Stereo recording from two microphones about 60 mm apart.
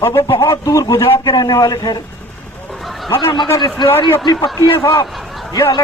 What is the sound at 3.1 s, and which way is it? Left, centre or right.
Speech, left.